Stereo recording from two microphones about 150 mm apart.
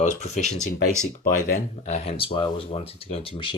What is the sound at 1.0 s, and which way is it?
Speech, 70° left (ahead or behind).